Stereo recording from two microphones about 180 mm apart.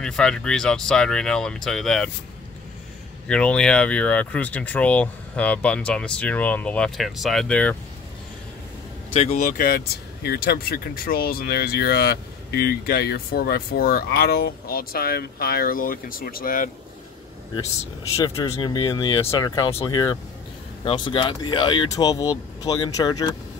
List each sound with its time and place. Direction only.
0.0 s speech: 5° left (ahead or behind)
3.3 s speech: 5° left (ahead or behind)
9.1 s speech: 40° left (ahead or behind)
18.1 s speech: 20° left (ahead or behind)